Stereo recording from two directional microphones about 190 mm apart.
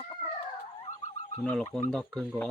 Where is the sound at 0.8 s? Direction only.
35° left (ahead or behind).